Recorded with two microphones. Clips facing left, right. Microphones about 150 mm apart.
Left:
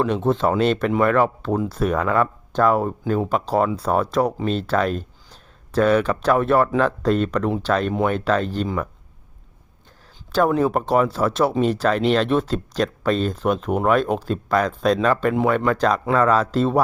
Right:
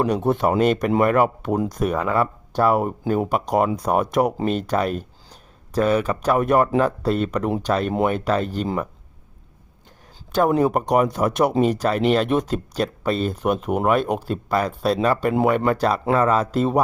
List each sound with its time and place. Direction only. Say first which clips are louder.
0.3 s speech: even; 15° right (ahead or behind)
10.6 s speech: even; 15° right (ahead or behind)